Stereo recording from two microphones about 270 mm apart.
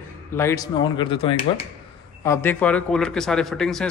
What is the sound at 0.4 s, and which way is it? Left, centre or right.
A man's voice, centre.